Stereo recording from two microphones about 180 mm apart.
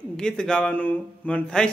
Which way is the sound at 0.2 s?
5° left (ahead or behind).